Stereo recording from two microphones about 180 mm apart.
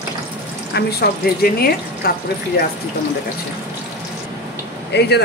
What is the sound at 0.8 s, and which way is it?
Speech, 60° left (ahead or behind).